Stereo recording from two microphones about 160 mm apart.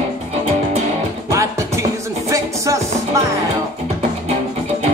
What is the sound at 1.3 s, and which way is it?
Music, 20° right (ahead or behind).